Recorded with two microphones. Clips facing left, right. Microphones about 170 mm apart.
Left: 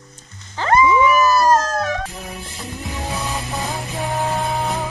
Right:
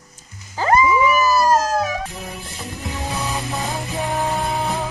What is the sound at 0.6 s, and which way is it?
Music, 5° right (ahead or behind).